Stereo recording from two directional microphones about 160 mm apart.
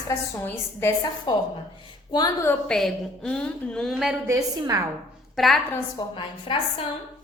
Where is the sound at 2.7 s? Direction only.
5° left (ahead or behind).